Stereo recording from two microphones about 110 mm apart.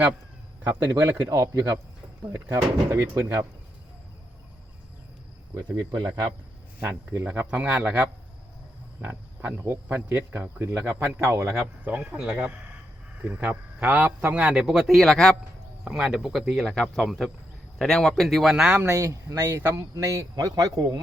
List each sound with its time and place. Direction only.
0.8 s speech: 35° right (ahead or behind)
6.8 s a man's voice: 20° right (ahead or behind)
10.8 s a man's voice: 10° right (ahead or behind)
11.2 s speech: 25° right (ahead or behind)
11.9 s a man's voice: 15° right (ahead or behind); by 15.4 s 5° left (ahead or behind)
15.8 s speech: 5° right (ahead or behind)
18.7 s speech: 20° right (ahead or behind)
18.9 s speech: 30° right (ahead or behind)